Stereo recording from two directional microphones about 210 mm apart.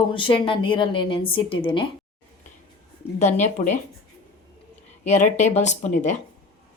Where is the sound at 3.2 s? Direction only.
35° left (ahead or behind).